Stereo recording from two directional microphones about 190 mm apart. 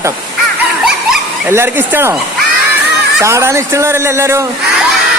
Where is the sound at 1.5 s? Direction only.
10° right (ahead or behind).